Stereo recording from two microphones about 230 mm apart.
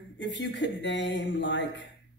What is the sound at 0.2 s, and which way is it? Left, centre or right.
A man's voice, left.